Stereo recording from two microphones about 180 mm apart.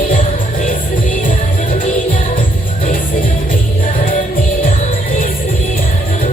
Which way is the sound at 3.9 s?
50° left (ahead or behind).